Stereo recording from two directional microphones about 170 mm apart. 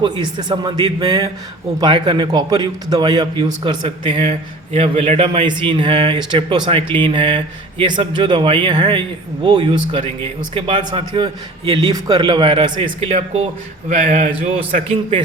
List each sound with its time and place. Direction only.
0.0 s speech: 25° right (ahead or behind)
4.3 s a man's voice: 40° right (ahead or behind)